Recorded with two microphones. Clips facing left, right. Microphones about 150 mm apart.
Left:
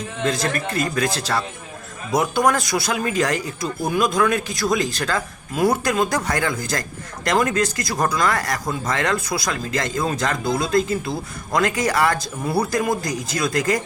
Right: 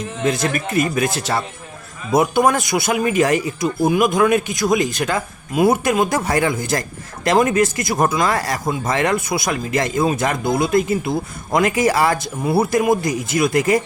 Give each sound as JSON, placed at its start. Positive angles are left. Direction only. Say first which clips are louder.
{"t": 0.3, "sound": "speech", "louder": "right 3 dB", "side_deg": -20}